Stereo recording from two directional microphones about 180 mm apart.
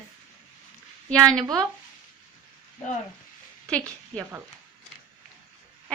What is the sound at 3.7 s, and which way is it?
Speech, 5° left (ahead or behind).